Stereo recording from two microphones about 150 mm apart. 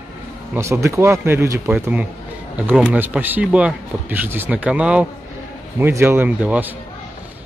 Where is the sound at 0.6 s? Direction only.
20° right (ahead or behind).